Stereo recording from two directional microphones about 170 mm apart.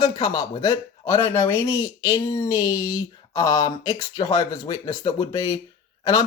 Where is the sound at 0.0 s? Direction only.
20° left (ahead or behind).